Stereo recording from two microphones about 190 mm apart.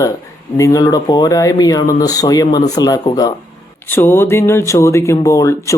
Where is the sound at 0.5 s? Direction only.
15° left (ahead or behind).